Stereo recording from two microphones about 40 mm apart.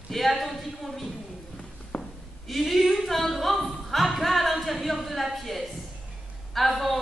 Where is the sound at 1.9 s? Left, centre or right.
Left.